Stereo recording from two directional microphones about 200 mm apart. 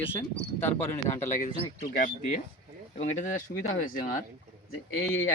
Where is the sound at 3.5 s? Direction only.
45° left (ahead or behind).